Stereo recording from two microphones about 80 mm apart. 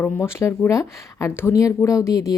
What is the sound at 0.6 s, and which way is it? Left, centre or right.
Speech, left.